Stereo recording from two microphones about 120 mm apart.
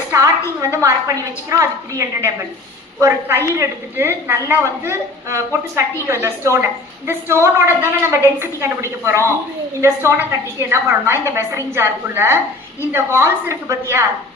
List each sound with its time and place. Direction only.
0.1 s a woman's voice: 25° right (ahead or behind)